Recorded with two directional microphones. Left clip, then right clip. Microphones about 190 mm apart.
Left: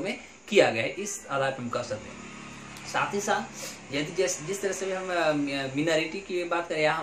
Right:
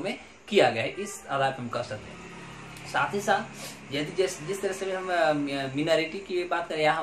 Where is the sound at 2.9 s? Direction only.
5° right (ahead or behind).